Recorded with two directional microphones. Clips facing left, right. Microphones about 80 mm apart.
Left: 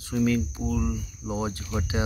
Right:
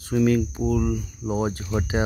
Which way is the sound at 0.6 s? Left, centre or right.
Right.